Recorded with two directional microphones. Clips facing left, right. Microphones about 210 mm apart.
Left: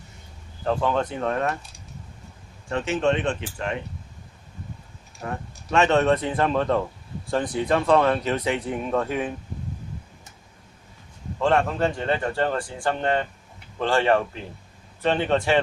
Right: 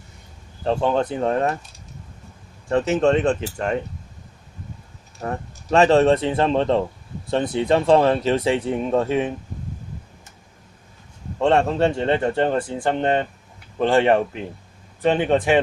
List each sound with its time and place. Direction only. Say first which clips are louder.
0.6 s speech: right 3 dB; 25° right (ahead or behind)
2.6 s speech: right 5 dB; 40° right (ahead or behind)
5.2 s speech: right 4 dB; 40° right (ahead or behind)
11.3 s speech: right 4 dB; 25° right (ahead or behind)